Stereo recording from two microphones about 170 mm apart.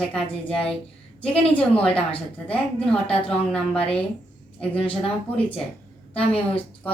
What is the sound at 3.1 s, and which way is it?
Speech, 35° left (ahead or behind).